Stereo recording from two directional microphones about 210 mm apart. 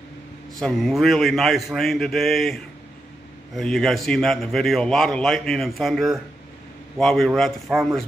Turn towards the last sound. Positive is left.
turn(degrees=0)  # may be behind; listen again after turning